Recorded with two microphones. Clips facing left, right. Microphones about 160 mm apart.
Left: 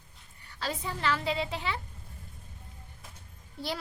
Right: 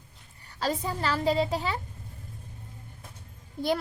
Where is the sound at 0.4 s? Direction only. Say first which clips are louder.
Right 6 dB; 40° right (ahead or behind).